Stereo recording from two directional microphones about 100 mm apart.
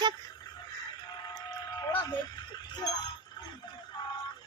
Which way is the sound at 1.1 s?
40° left (ahead or behind).